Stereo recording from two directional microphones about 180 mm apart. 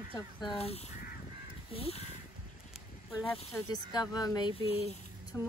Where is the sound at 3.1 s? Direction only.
15° left (ahead or behind).